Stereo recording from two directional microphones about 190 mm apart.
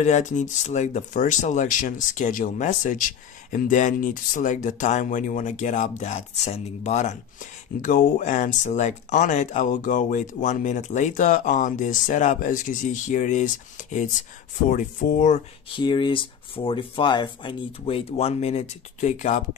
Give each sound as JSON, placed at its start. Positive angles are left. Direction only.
{"t": 0.0, "sound": "speech", "side_deg": 40}
{"t": 15.7, "sound": "speech", "side_deg": 25}